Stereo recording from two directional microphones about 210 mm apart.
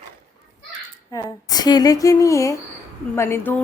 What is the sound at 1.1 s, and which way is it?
A woman's voice, 15° left (ahead or behind).